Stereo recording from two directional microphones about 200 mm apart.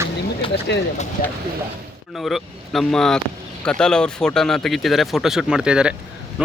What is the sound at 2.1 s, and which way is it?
Speech, centre (ahead or behind).